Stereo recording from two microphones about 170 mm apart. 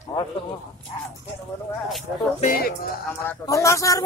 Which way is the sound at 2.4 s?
55° left (ahead or behind).